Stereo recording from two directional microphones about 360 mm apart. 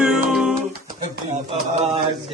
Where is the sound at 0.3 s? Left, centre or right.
Centre.